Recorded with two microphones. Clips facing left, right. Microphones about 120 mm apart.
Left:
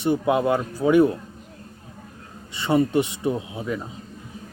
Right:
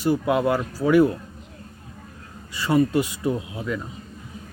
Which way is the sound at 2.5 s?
25° left (ahead or behind).